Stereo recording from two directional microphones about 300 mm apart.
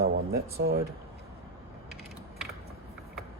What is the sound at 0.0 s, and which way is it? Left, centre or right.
Speech, right.